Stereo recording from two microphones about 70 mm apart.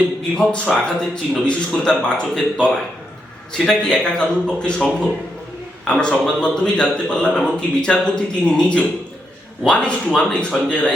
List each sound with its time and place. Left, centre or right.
0.3 s a man's voice: centre
5.9 s a man's voice: centre